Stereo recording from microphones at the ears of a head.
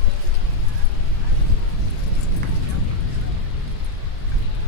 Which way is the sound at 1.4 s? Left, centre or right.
Left.